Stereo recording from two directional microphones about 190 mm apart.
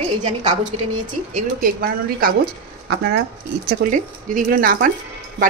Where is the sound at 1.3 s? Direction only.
45° right (ahead or behind).